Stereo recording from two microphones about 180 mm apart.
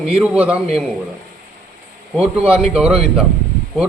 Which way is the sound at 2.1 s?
5° right (ahead or behind).